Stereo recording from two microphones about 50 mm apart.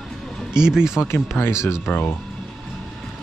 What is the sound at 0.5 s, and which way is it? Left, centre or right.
Speech, centre.